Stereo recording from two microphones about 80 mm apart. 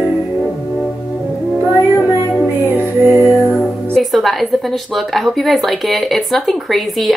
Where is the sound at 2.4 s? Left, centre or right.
Right.